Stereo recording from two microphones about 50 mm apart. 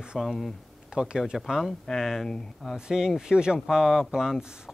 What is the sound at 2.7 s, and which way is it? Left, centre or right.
Speech, centre.